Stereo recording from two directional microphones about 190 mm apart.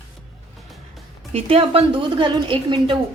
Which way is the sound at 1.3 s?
30° right (ahead or behind).